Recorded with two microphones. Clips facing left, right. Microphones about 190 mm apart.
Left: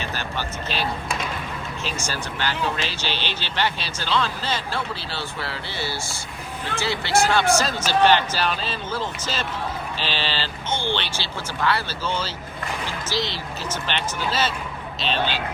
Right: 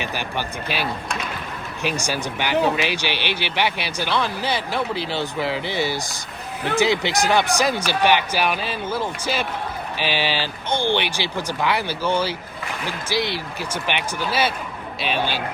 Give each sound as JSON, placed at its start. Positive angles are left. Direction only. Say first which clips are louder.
{"t": 0.0, "sound": "speech", "louder": "right 2 dB", "side_deg": -15}